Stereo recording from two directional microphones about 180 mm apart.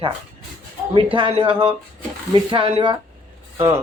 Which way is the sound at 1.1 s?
30° right (ahead or behind).